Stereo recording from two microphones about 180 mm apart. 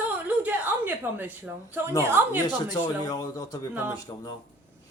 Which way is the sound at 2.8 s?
20° left (ahead or behind).